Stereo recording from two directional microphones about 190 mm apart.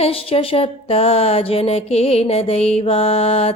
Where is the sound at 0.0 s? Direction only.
30° left (ahead or behind).